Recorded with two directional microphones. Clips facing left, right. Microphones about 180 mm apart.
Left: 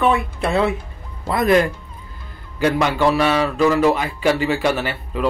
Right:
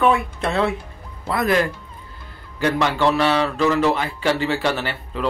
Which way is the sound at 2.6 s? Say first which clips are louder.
Left 2 dB; 15° left (ahead or behind).